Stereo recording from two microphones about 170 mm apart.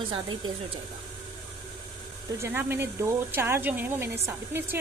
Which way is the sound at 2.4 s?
15° right (ahead or behind).